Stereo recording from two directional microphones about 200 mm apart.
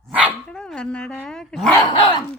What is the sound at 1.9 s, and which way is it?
Dog, 25° left (ahead or behind).